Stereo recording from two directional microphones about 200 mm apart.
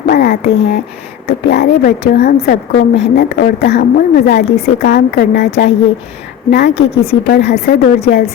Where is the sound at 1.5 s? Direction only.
55° left (ahead or behind).